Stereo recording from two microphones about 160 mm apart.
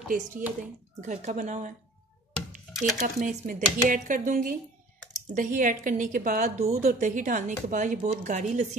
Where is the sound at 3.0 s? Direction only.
55° right (ahead or behind).